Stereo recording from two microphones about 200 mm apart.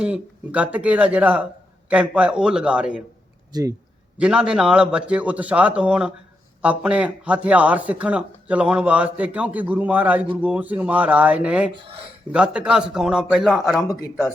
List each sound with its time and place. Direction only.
0.0 s a man's voice: 5° right (ahead or behind)
3.5 s a man's voice: 15° right (ahead or behind)
4.2 s a man's voice: 5° right (ahead or behind)
11.7 s speech: 25° right (ahead or behind)
12.3 s a man's voice: 5° right (ahead or behind)